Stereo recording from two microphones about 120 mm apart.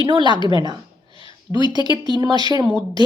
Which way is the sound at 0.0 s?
40° right (ahead or behind).